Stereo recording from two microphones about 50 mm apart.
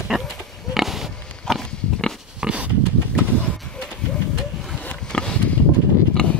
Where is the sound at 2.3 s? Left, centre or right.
Centre.